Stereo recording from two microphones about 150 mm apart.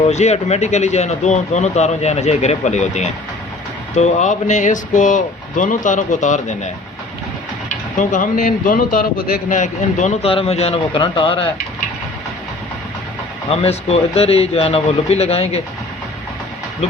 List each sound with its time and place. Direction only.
0.0 s speech: 45° left (ahead or behind)
7.9 s speech: 60° left (ahead or behind)
10.2 s speech: 40° left (ahead or behind)
13.5 s speech: 40° left (ahead or behind)